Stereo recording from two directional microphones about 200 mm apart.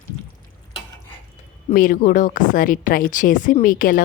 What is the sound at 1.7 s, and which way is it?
A woman's voice, 45° left (ahead or behind).